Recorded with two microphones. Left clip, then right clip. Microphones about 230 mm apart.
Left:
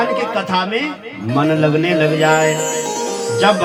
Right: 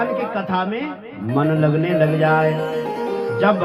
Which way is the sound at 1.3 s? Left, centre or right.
Left.